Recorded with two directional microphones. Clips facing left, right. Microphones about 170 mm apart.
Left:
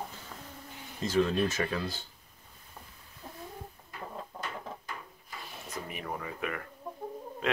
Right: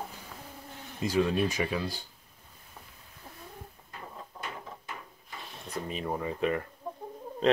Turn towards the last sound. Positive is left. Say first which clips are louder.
# right 6 dB
turn(degrees=-25)  # may be behind; listen again after turning